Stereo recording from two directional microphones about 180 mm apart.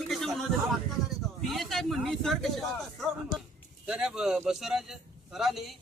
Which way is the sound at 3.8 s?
5° right (ahead or behind).